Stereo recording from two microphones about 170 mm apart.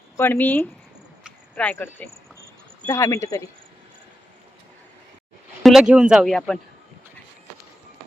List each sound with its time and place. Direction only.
0.2 s speech: 10° left (ahead or behind)
5.6 s speech: centre (ahead or behind)